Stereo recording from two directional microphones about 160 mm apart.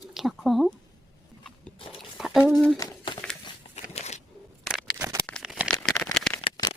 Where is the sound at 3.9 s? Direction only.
45° left (ahead or behind).